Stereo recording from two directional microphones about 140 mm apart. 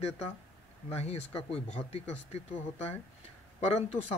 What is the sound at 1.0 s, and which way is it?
Speech, 50° left (ahead or behind).